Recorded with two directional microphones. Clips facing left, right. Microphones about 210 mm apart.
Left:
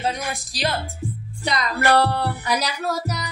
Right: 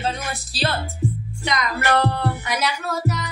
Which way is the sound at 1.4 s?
35° left (ahead or behind).